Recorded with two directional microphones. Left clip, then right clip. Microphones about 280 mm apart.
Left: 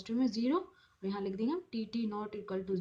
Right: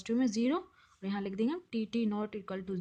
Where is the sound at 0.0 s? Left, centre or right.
Right.